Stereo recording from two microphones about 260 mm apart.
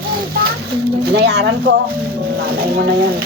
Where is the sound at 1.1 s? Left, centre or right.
Right.